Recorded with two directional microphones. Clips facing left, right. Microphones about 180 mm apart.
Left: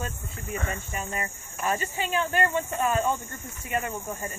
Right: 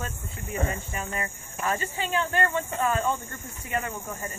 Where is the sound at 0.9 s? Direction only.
25° left (ahead or behind).